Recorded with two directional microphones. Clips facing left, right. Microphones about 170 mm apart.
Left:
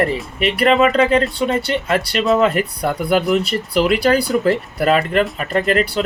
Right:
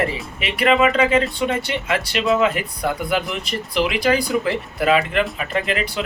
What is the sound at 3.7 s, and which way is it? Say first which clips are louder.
Speech: left 4 dB; 40° left (ahead or behind).